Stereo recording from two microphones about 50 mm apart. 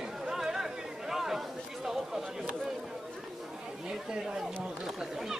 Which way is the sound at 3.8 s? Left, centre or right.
Centre.